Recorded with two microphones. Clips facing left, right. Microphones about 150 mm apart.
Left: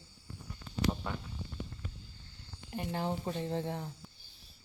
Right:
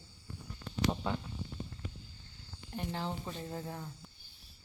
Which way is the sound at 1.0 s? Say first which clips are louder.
Right 4 dB; 25° right (ahead or behind).